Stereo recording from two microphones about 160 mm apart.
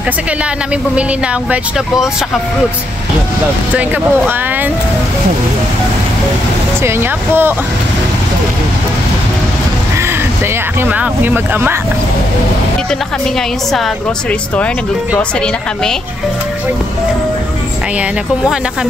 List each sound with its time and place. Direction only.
0.9 s speech: 5° right (ahead or behind)
3.7 s speech: 10° right (ahead or behind)
6.8 s speech: 15° right (ahead or behind)
9.9 s speech: 15° right (ahead or behind)
13.7 s a woman's voice: centre (ahead or behind)
15.1 s a woman's voice: 5° left (ahead or behind)